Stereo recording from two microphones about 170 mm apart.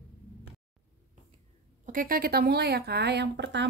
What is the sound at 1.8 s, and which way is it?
A woman's voice, 55° right (ahead or behind).